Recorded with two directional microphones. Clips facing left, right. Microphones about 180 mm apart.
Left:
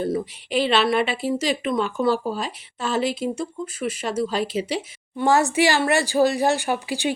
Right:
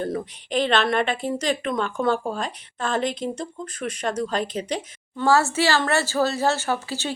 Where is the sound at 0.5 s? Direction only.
10° left (ahead or behind).